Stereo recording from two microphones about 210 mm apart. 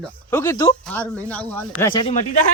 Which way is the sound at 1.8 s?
20° left (ahead or behind).